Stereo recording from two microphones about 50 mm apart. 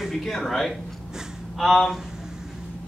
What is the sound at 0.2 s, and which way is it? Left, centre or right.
A man's voice, centre.